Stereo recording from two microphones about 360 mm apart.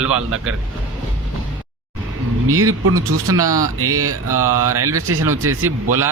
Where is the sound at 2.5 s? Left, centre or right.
Right.